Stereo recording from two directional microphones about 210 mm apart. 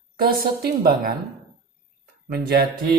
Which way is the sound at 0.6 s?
40° right (ahead or behind).